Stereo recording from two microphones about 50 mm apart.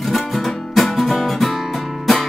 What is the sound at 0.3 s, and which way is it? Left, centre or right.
Music, centre.